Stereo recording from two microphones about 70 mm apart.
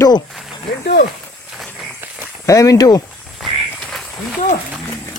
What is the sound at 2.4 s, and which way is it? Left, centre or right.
Speech, left.